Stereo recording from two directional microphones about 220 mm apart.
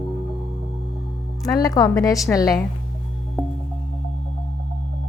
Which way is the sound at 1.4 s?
15° left (ahead or behind).